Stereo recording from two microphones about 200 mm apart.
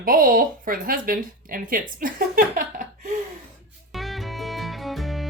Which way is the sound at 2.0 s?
45° right (ahead or behind).